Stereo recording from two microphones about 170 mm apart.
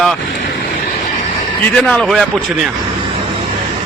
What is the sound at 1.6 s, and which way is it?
A man's voice, 5° left (ahead or behind).